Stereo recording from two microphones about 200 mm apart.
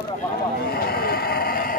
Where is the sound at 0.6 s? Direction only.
50° left (ahead or behind).